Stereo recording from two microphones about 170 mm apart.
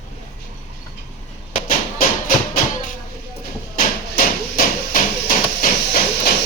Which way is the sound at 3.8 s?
55° left (ahead or behind).